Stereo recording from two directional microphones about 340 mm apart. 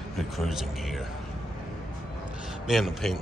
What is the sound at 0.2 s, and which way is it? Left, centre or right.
Speech, centre.